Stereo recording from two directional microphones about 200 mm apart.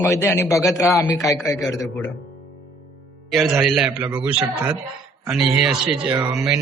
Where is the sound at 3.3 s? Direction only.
Centre (ahead or behind).